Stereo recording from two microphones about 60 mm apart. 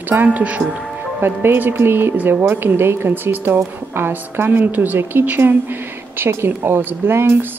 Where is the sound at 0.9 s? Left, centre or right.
Right.